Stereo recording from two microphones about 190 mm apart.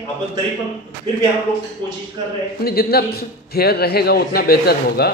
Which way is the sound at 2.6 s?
55° left (ahead or behind).